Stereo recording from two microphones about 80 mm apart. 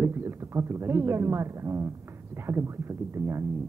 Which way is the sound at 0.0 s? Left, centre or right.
Right.